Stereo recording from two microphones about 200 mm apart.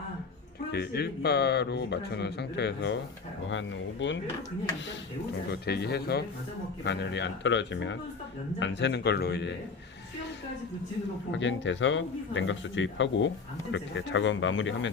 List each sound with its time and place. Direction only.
0.7 s speech: 55° left (ahead or behind)
5.5 s speech: 55° left (ahead or behind)
11.3 s speech: 65° left (ahead or behind)